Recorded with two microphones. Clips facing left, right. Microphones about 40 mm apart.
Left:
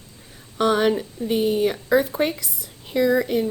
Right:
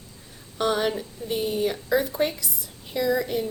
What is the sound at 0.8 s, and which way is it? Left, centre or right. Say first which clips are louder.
A woman's voice: left 6 dB; left.